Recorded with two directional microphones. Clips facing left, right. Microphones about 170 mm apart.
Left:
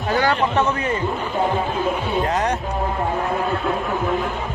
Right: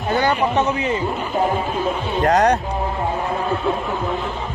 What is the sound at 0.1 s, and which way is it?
Speech, 20° right (ahead or behind).